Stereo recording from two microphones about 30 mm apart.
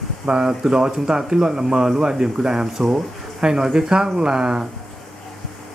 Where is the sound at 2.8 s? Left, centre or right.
Centre.